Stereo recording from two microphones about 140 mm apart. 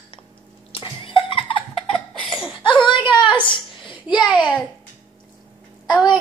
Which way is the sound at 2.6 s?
35° left (ahead or behind).